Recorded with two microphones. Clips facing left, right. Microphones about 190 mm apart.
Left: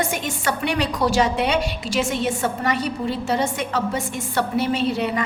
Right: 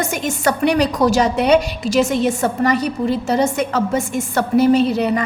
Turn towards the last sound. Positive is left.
turn(degrees=-40)  # may be behind; listen again after turning